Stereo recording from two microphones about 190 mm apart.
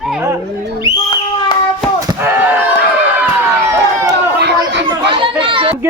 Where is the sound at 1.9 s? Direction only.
15° right (ahead or behind).